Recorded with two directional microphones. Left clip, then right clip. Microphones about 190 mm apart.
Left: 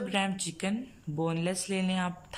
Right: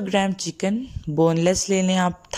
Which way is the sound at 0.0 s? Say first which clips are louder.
Right 9 dB; 35° right (ahead or behind).